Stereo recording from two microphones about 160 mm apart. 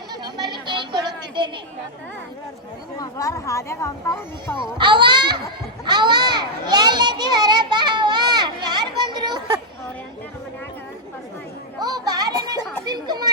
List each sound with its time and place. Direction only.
0.1 s a sound: 25° right (ahead or behind)
3.0 s speech: 20° left (ahead or behind)
4.8 s a child's voice: 30° right (ahead or behind)
5.8 s children playing: 25° right (ahead or behind)
11.8 s children playing: 25° right (ahead or behind)